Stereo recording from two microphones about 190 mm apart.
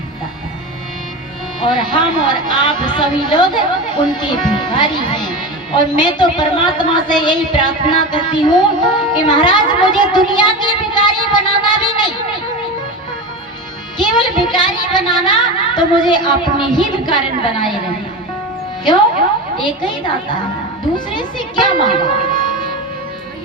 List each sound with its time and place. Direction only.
1.6 s a woman's voice: 25° left (ahead or behind)
14.0 s a woman's voice: 25° left (ahead or behind)
19.6 s a woman's voice: 25° left (ahead or behind)